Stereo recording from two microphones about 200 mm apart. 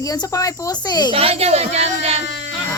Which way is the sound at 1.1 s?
30° right (ahead or behind).